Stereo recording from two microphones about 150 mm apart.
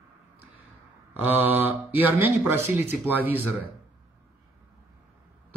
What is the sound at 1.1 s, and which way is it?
Speech, 10° right (ahead or behind).